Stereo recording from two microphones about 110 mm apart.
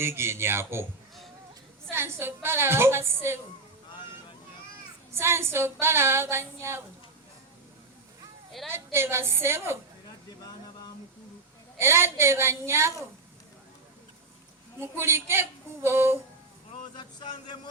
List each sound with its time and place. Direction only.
0.0 s a woman's voice: 25° right (ahead or behind)
1.9 s a woman's voice: 20° right (ahead or behind)
5.1 s a woman's voice: 20° right (ahead or behind)
8.7 s a woman's voice: 20° right (ahead or behind)
11.8 s a woman's voice: 20° right (ahead or behind)
14.8 s a woman's voice: 20° right (ahead or behind)
16.9 s speech: 40° left (ahead or behind)